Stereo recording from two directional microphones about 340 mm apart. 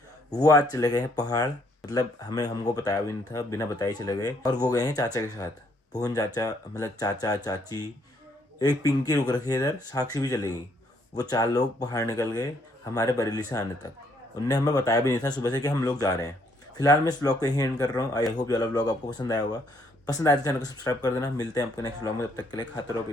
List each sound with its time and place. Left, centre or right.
0.3 s speech: centre